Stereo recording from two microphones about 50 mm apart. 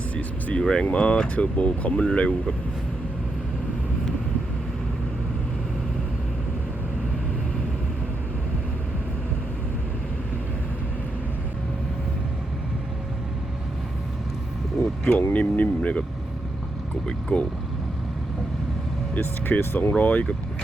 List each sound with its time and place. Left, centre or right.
0.2 s vehicle: left
0.6 s speech: centre
15.3 s speech: left
17.1 s speech: centre
19.2 s speech: left